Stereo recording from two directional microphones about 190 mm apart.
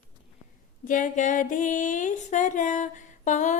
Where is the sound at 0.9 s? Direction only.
45° left (ahead or behind).